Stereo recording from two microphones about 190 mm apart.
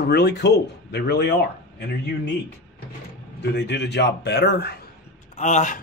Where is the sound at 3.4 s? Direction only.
65° left (ahead or behind).